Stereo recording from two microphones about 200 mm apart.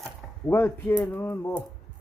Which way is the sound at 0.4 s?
10° left (ahead or behind).